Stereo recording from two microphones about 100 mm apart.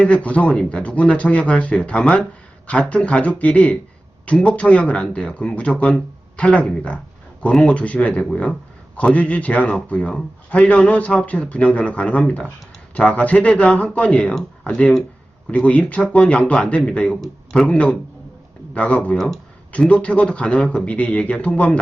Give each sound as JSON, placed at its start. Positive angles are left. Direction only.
{"t": 0.0, "sound": "a man's voice", "side_deg": 15}
{"t": 19.1, "sound": "speech", "side_deg": 5}
{"t": 19.7, "sound": "a man's voice", "side_deg": 15}